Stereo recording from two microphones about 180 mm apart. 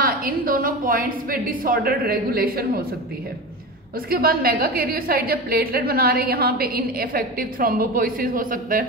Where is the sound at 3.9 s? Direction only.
55° right (ahead or behind).